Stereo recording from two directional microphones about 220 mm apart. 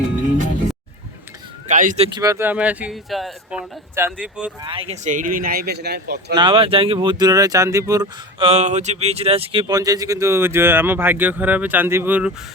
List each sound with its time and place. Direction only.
1.6 s a sound: 35° right (ahead or behind)
2.1 s speech: 15° right (ahead or behind)
4.6 s speech: 25° right (ahead or behind); by 6.3 s 50° right (ahead or behind)
6.3 s speech: 20° right (ahead or behind)